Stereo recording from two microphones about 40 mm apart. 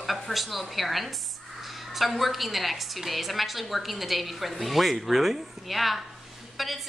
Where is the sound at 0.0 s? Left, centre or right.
Centre.